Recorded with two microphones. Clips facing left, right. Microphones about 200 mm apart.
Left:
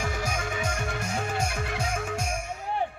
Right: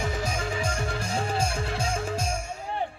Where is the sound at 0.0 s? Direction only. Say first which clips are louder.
Right 1 dB; 25° right (ahead or behind).